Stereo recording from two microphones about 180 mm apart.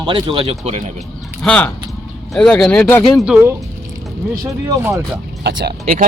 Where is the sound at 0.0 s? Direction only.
25° right (ahead or behind).